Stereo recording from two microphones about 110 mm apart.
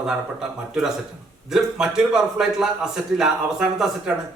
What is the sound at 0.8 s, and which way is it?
A man's voice, 5° right (ahead or behind).